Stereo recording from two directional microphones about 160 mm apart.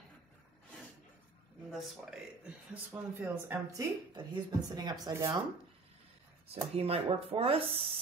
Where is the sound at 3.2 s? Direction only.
20° right (ahead or behind).